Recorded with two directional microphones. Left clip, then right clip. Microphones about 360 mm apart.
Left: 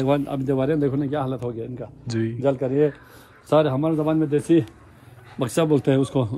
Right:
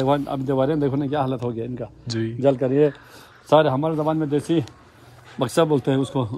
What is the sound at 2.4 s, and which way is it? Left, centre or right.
Speech, right.